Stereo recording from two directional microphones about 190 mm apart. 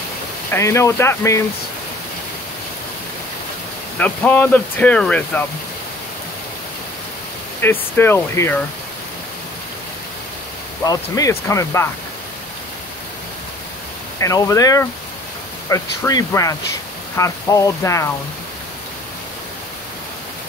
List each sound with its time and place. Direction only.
0.5 s speech: 15° left (ahead or behind)
4.0 s speech: 10° left (ahead or behind)
7.6 s speech: 10° left (ahead or behind)
10.9 s speech: 20° left (ahead or behind)
14.2 s speech: 15° left (ahead or behind)